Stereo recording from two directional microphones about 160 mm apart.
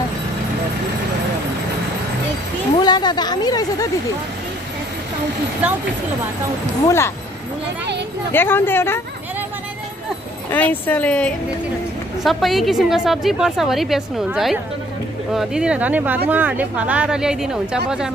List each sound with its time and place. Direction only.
2.7 s a woman's voice: 25° left (ahead or behind)
6.8 s speech: 15° left (ahead or behind)
8.3 s speech: 15° left (ahead or behind)
10.5 s a woman's voice: 10° left (ahead or behind)